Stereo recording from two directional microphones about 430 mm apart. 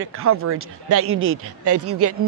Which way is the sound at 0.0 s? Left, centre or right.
Right.